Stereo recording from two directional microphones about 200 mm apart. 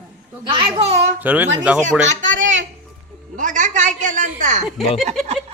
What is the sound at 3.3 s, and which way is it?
A man's voice, 40° right (ahead or behind).